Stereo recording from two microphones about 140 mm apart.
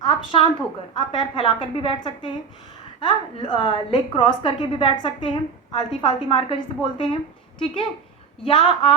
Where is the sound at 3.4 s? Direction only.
35° left (ahead or behind).